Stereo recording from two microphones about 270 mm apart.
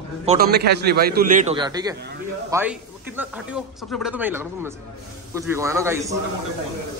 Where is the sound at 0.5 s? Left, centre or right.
Right; by 6.1 s centre.